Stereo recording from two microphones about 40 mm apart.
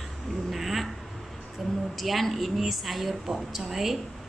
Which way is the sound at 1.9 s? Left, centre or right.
Centre.